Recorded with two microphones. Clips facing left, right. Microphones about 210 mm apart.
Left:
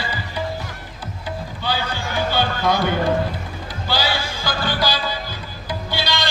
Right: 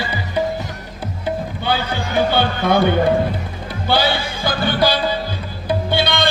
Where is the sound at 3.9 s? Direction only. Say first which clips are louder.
Right 5 dB; 60° right (ahead or behind).